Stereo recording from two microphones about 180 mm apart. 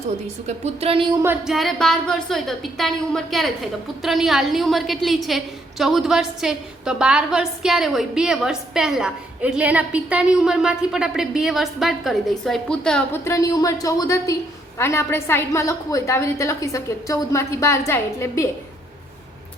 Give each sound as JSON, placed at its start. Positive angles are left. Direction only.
{"t": 0.4, "sound": "a woman's voice", "side_deg": -35}
{"t": 1.2, "sound": "a sound", "side_deg": -10}
{"t": 1.5, "sound": "a woman's voice", "side_deg": 0}
{"t": 13.2, "sound": "a woman's voice", "side_deg": 20}